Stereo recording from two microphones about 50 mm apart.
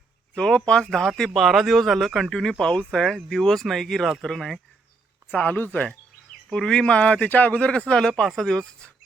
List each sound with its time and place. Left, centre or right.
0.3 s speech: centre
1.3 s speech: centre
5.3 s speech: left
6.5 s speech: centre